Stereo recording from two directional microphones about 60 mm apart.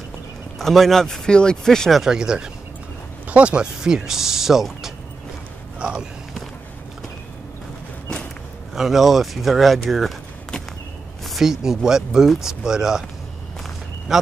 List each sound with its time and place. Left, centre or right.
0.6 s speech: centre
2.0 s speech: centre
5.8 s speech: centre
8.7 s speech: centre
11.2 s speech: centre
14.1 s speech: centre